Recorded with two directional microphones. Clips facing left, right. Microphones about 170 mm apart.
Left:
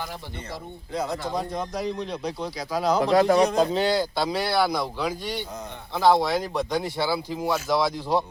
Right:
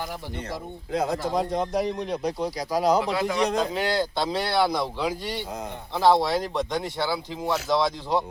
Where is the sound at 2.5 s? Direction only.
40° right (ahead or behind).